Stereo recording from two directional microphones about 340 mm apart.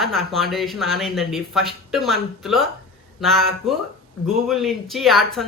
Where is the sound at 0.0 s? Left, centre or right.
Centre.